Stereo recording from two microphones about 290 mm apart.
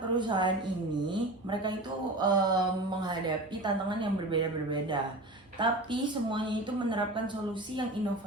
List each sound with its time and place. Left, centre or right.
0.1 s a woman's voice: centre